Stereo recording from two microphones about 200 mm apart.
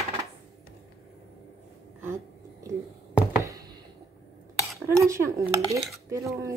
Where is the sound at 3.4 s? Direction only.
15° right (ahead or behind).